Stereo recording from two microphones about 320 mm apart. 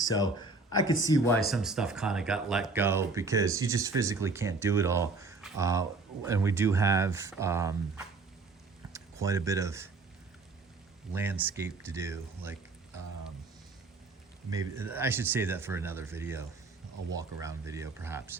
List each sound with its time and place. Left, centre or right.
0.0 s a sound: centre
1.0 s speech: centre
1.5 s speech: centre
11.1 s speech: centre
14.5 s speech: centre